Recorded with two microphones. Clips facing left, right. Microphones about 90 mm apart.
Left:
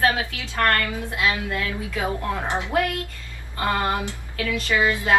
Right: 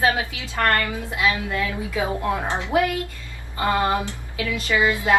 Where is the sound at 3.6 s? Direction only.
15° right (ahead or behind).